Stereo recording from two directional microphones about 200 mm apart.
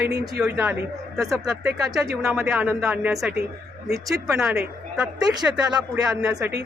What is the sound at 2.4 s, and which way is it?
A woman's voice, 5° right (ahead or behind).